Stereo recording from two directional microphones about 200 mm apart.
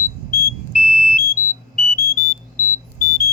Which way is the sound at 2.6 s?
40° left (ahead or behind).